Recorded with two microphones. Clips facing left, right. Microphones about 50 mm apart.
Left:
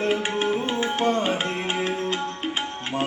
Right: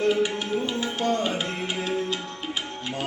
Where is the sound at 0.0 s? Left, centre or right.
Left.